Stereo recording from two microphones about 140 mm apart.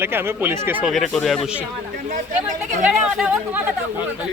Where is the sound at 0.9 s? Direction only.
Centre (ahead or behind).